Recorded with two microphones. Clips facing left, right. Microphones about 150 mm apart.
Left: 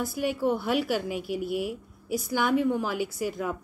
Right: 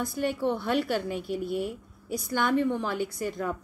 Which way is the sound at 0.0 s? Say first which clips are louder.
Left 1 dB; 5° left (ahead or behind).